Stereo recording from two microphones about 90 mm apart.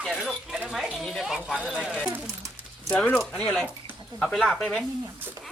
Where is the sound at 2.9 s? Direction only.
10° left (ahead or behind).